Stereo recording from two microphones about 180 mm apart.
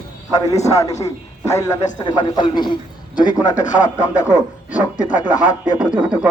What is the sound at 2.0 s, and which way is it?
Speech, 25° left (ahead or behind).